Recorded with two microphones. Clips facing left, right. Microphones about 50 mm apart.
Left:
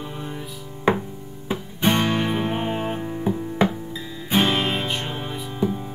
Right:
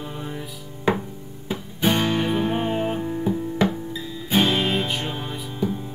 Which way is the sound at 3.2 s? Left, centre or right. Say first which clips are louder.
Left 1 dB; centre.